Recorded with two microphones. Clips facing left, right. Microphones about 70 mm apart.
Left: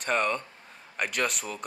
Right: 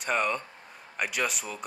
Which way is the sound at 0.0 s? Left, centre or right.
Centre.